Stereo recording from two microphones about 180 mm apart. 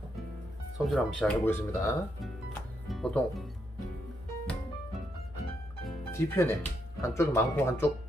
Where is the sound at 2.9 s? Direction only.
5° left (ahead or behind).